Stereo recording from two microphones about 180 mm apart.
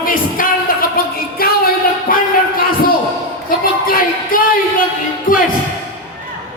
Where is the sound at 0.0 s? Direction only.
50° left (ahead or behind).